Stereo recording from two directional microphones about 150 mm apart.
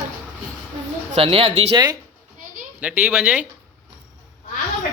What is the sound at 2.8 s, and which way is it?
Speech, 10° right (ahead or behind).